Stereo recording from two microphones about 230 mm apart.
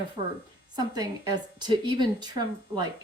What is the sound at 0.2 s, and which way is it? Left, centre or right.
Speech, centre.